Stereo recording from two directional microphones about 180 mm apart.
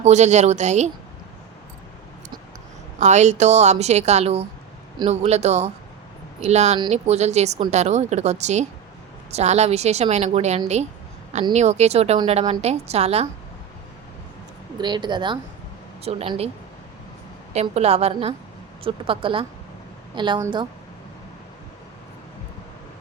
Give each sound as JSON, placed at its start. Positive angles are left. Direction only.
{"t": 0.0, "sound": "a woman's voice", "side_deg": -40}
{"t": 3.0, "sound": "a woman's voice", "side_deg": -40}
{"t": 14.8, "sound": "a woman's voice", "side_deg": -25}
{"t": 17.5, "sound": "a woman's voice", "side_deg": -35}